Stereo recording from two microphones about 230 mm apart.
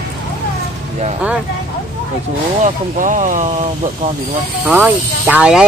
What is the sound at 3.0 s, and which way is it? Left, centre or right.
Speech, right.